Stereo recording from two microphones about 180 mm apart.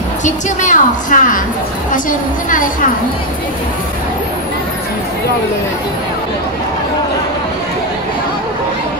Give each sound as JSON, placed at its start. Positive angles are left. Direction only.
{"t": 0.2, "sound": "a woman's voice", "side_deg": 45}